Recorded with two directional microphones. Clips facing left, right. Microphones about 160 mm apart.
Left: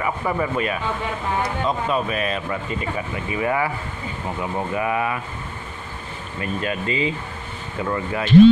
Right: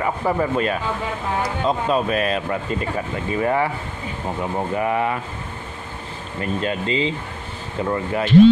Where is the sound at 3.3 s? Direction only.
35° right (ahead or behind).